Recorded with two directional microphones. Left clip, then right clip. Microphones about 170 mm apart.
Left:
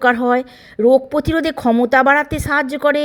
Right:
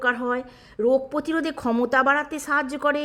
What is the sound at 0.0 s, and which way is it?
A woman's voice, 30° left (ahead or behind).